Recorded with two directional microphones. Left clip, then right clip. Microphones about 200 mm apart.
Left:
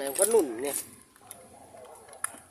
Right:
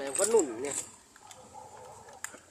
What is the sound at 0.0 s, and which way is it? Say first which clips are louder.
Speech: left 2 dB; 15° left (ahead or behind).